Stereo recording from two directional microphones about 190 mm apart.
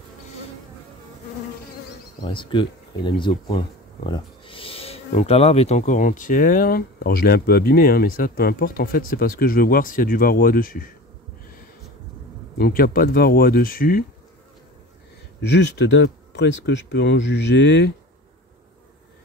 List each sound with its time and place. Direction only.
2.2 s speech: 25° left (ahead or behind); by 10.9 s 50° left (ahead or behind)
12.5 s speech: 50° left (ahead or behind)
15.5 s speech: 70° left (ahead or behind)